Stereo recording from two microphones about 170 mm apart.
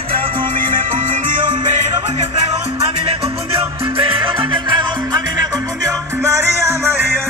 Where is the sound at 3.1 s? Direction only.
35° right (ahead or behind).